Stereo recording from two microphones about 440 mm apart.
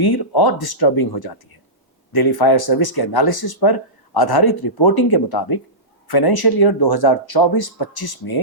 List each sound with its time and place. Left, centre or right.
0.0 s speech: left